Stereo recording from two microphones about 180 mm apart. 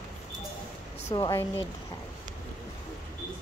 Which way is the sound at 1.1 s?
15° left (ahead or behind).